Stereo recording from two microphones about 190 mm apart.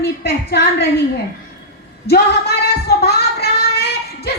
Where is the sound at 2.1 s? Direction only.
55° left (ahead or behind).